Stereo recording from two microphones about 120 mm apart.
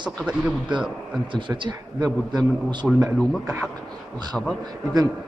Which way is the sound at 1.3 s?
40° right (ahead or behind).